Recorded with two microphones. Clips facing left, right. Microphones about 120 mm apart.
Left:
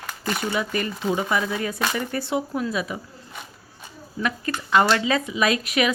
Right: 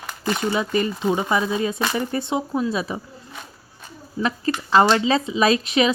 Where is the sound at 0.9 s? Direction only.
10° right (ahead or behind).